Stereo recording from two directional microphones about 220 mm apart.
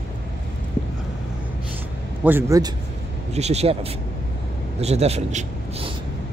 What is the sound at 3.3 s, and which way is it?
A man's voice, 30° right (ahead or behind).